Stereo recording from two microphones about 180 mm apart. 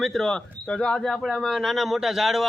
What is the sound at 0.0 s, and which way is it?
Speech, centre (ahead or behind).